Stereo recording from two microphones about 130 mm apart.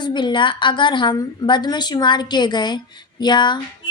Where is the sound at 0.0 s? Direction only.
35° left (ahead or behind).